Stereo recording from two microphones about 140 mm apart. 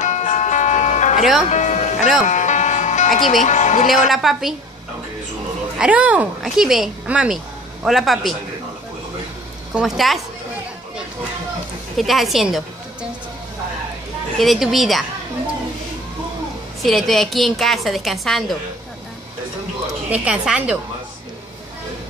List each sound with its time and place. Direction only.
0.0 s music: 60° left (ahead or behind)
4.1 s a woman's voice: centre (ahead or behind)
5.8 s a woman's voice: 10° right (ahead or behind)
9.8 s a woman's voice: centre (ahead or behind)
12.0 s a woman's voice: centre (ahead or behind)
14.4 s a woman's voice: centre (ahead or behind)
16.8 s a woman's voice: centre (ahead or behind)
20.1 s a woman's voice: 5° right (ahead or behind)